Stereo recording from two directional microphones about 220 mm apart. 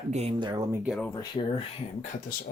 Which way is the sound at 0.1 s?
30° right (ahead or behind).